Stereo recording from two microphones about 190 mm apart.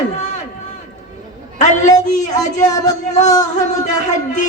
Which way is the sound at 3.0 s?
40° left (ahead or behind).